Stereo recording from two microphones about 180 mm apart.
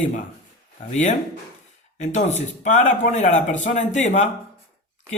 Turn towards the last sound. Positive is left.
turn(degrees=40)  # may be behind; listen again after turning